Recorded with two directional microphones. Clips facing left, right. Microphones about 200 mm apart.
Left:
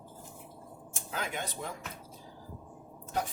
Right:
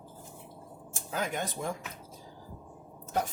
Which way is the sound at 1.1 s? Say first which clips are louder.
Right 4 dB; 45° right (ahead or behind).